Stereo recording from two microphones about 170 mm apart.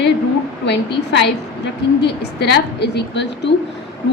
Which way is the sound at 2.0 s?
75° left (ahead or behind).